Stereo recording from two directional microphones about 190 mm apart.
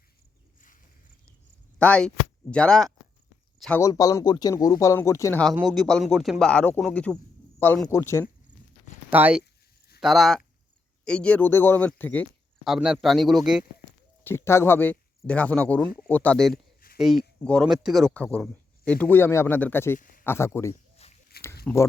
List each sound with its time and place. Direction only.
1.8 s speech: 5° left (ahead or behind)
3.8 s speech: 20° left (ahead or behind)
5.5 s speech: centre (ahead or behind)
9.0 s speech: 10° right (ahead or behind)
14.3 s speech: 15° left (ahead or behind)
16.8 s a sound: 50° left (ahead or behind)
17.4 s speech: 5° left (ahead or behind)
20.0 s a sound: 45° left (ahead or behind)
20.2 s speech: 15° left (ahead or behind)
20.9 s a sound: 35° left (ahead or behind)
21.7 s speech: 5° left (ahead or behind)